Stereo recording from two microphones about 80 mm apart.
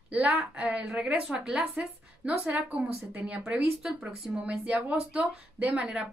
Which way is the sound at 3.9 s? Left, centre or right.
Centre.